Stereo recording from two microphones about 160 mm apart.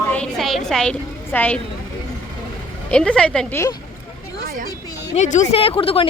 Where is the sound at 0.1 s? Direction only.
5° left (ahead or behind).